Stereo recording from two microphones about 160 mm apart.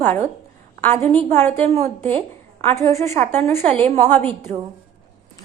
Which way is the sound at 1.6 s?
40° right (ahead or behind).